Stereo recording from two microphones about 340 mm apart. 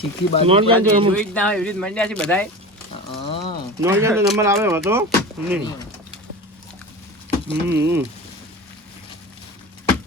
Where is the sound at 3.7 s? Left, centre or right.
Centre.